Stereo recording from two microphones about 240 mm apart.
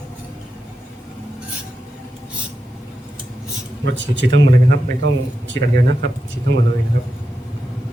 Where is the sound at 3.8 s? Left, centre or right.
Right.